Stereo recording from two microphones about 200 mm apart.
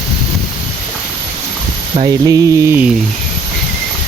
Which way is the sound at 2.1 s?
15° right (ahead or behind).